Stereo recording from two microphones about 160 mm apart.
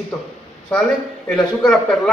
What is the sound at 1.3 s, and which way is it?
Speech, 5° left (ahead or behind).